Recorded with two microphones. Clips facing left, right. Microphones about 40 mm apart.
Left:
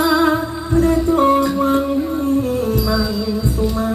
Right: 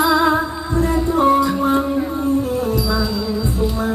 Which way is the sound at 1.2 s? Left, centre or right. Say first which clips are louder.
Right 2 dB; left.